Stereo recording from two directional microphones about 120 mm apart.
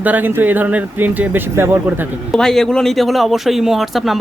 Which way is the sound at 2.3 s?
5° left (ahead or behind).